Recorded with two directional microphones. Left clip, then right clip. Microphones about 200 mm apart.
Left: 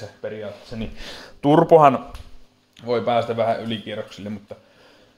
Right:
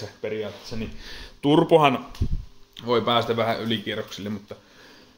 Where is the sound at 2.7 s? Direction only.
5° right (ahead or behind).